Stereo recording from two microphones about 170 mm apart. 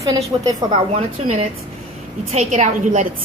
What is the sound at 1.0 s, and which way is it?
A woman's voice, 40° right (ahead or behind).